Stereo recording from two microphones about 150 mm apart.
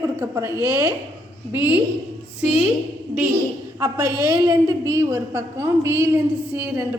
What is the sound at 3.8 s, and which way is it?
A woman's voice, 20° right (ahead or behind).